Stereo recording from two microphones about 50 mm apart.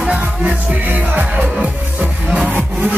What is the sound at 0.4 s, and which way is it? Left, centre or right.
Music, right.